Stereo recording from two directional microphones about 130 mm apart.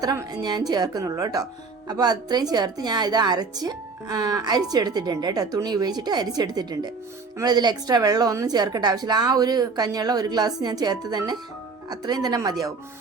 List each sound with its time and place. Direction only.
0.0 s a woman's voice: 30° right (ahead or behind)